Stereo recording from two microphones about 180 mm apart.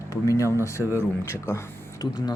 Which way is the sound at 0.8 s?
10° right (ahead or behind).